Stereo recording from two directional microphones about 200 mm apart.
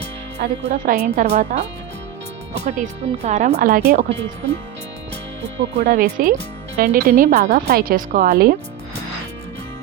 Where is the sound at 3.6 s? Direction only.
50° right (ahead or behind).